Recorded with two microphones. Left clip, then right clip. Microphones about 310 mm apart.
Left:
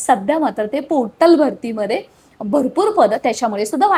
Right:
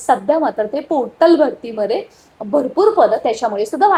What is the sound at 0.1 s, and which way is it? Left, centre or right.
A woman's voice, left.